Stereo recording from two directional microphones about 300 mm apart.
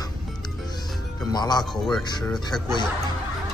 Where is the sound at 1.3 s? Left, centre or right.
Centre.